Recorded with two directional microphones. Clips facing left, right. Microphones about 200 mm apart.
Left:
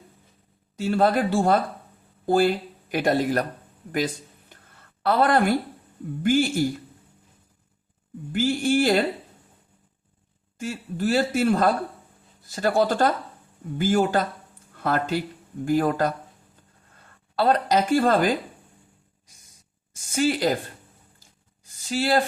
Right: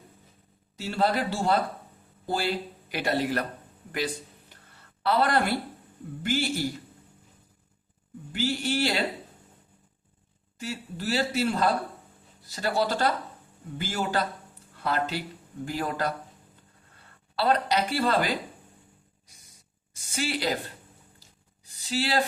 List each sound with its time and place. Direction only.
0.8 s speech: 50° left (ahead or behind)
3.9 s a sound: 45° left (ahead or behind)
5.0 s speech: 50° left (ahead or behind)
8.3 s speech: 50° left (ahead or behind)
10.6 s speech: 50° left (ahead or behind)
17.3 s speech: 45° left (ahead or behind)
19.9 s speech: 45° left (ahead or behind)
21.2 s a sound: 50° left (ahead or behind)